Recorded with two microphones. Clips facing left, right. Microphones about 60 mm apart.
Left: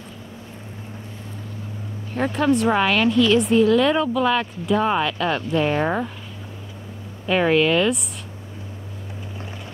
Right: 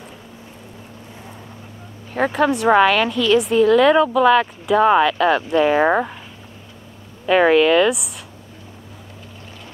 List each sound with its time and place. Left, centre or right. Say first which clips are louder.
2.3 s a woman's voice: right 4 dB; centre
5.9 s speech: right 6 dB; right
7.2 s a woman's voice: right 5 dB; centre